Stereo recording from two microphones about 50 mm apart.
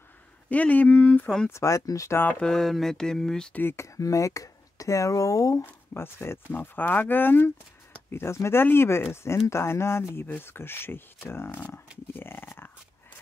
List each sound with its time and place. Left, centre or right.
0.5 s speech: left
1.5 s speech: left
2.4 s mantra: centre
3.7 s speech: left
5.9 s speech: left
8.1 s speech: left
12.1 s a sound: left